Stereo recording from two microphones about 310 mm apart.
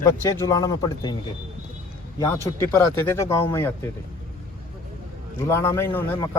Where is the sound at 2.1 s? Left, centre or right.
Centre.